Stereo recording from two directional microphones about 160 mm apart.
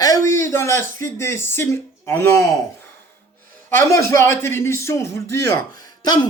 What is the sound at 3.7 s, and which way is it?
A man's voice, 15° left (ahead or behind).